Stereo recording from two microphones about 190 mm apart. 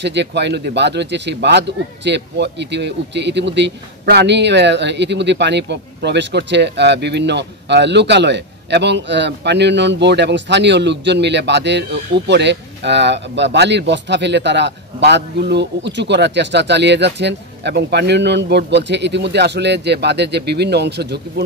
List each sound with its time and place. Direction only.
0.0 s speech: 65° right (ahead or behind)